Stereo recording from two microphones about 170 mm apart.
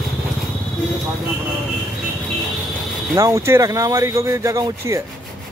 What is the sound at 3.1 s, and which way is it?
Speech, 20° right (ahead or behind).